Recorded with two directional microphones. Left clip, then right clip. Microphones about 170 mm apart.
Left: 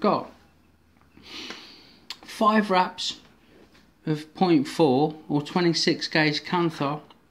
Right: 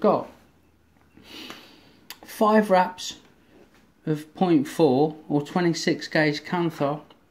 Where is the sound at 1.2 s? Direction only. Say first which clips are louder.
Left 2 dB; 15° right (ahead or behind).